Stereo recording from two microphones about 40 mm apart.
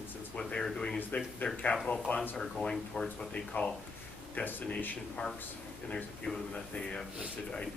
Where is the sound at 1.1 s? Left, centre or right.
Left.